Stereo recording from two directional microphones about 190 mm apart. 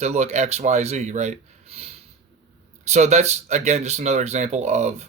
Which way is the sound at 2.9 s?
35° right (ahead or behind).